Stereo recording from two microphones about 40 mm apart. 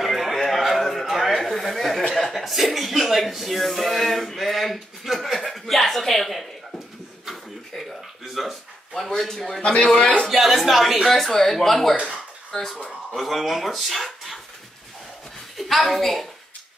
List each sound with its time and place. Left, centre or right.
0.0 s a sound: centre
2.3 s speech: centre
8.3 s speech: centre
9.6 s a man's voice: left
10.3 s speech: centre
11.1 s speech: centre
13.1 s speech: centre
15.9 s speech: centre